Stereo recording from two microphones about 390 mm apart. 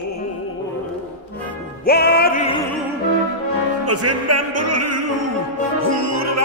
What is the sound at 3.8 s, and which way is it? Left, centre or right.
Music, right.